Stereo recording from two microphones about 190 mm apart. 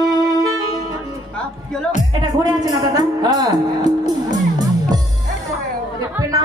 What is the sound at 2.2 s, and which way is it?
Speech, 20° right (ahead or behind).